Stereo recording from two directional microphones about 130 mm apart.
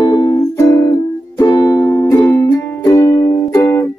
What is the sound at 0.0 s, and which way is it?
Music, 30° left (ahead or behind).